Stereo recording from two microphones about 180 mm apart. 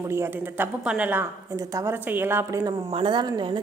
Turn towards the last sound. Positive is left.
turn(degrees=-25)  # may be behind; listen again after turning